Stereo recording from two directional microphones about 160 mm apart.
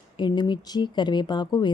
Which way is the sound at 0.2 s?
30° left (ahead or behind).